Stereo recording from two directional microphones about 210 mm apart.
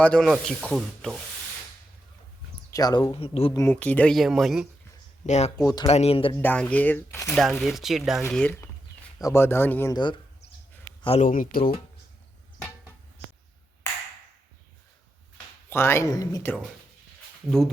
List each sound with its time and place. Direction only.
0.0 s rub: 5° left (ahead or behind)
2.6 s speech: 15° left (ahead or behind)
3.6 s rub: 10° left (ahead or behind)
5.2 s speech: 35° left (ahead or behind)
5.5 s speech: 15° left (ahead or behind)
5.9 s speech: 30° left (ahead or behind)
6.3 s speech: 10° left (ahead or behind)
7.3 s rub: centre (ahead or behind)
8.2 s speech: 5° left (ahead or behind)
9.9 s speech: 20° left (ahead or behind)
11.3 s speech: 40° left (ahead or behind)
15.7 s speech: 10° left (ahead or behind)